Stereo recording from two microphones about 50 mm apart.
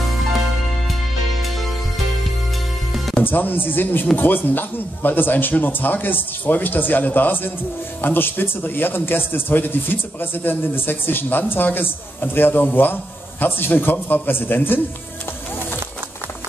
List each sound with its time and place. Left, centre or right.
3.3 s a man's voice: left